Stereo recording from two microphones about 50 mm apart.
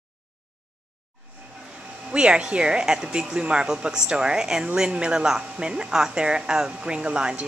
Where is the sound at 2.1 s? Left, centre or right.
Centre.